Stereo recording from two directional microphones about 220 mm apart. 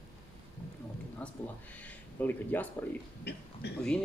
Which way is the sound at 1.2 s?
5° left (ahead or behind).